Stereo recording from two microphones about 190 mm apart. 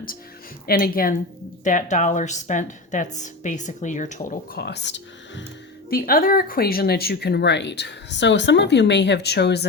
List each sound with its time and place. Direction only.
0.7 s a woman's voice: 50° left (ahead or behind)
4.5 s speech: 60° left (ahead or behind)
5.9 s speech: 50° left (ahead or behind)